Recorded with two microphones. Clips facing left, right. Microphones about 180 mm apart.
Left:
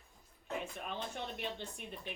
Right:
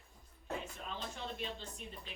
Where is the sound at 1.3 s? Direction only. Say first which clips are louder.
Left 2 dB; 60° left (ahead or behind).